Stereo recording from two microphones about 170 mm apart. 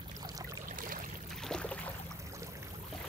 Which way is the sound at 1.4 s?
5° left (ahead or behind).